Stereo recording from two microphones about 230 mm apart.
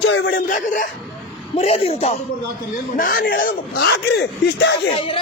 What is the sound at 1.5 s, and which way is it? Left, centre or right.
Speech, left.